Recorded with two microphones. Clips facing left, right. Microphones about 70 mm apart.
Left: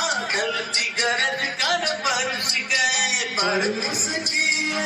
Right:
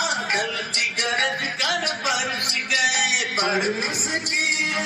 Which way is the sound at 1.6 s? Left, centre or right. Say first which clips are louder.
Left 2 dB; left.